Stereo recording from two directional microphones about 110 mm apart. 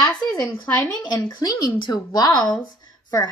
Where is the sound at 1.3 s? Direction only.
40° left (ahead or behind).